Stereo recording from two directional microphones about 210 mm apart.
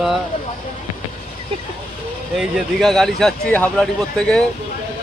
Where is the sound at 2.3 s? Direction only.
Centre (ahead or behind).